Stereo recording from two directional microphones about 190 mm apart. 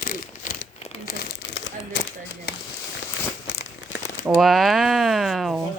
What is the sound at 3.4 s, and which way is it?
Crumpling, 70° left (ahead or behind).